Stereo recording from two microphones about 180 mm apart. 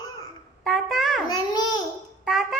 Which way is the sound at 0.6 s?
Centre (ahead or behind).